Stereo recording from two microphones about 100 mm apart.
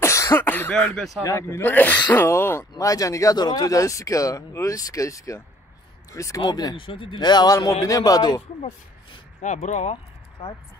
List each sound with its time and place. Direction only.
0.0 s speech: 30° left (ahead or behind)
0.9 s speech: centre (ahead or behind)
1.2 s speech: 30° left (ahead or behind)
1.6 s speech: 20° left (ahead or behind)
2.7 s speech: 35° left (ahead or behind)
6.8 s a man's voice: 60° left (ahead or behind); by 8.4 s 40° left (ahead or behind)
8.4 s speech: 90° left